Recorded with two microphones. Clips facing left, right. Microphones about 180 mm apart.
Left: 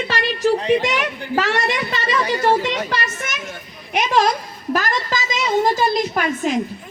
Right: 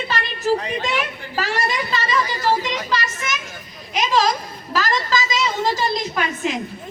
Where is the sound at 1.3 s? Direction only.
75° left (ahead or behind); by 5.8 s 55° left (ahead or behind).